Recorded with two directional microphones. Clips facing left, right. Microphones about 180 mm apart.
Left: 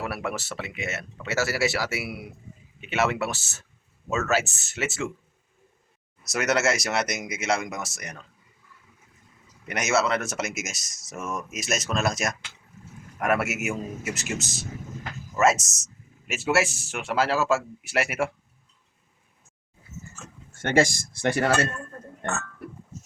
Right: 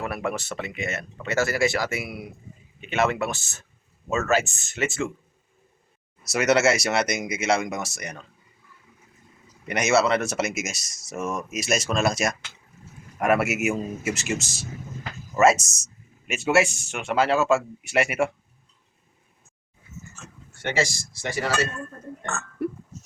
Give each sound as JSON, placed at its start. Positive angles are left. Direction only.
{"t": 0.0, "sound": "speech", "side_deg": 5}
{"t": 6.3, "sound": "speech", "side_deg": 0}
{"t": 9.6, "sound": "speech", "side_deg": 0}
{"t": 20.5, "sound": "speech", "side_deg": 45}